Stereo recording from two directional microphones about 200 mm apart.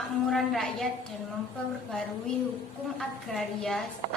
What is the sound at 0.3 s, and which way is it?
Speech, centre (ahead or behind).